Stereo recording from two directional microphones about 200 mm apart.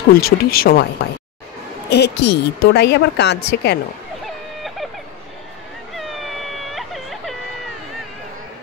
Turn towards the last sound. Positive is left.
turn(degrees=0)  # may be behind; listen again after turning